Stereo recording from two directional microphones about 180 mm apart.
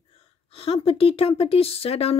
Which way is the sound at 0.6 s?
30° left (ahead or behind).